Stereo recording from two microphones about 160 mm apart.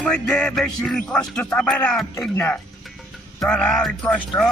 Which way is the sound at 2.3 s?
15° left (ahead or behind).